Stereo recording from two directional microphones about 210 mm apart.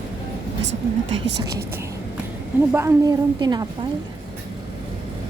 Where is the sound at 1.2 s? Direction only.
55° right (ahead or behind).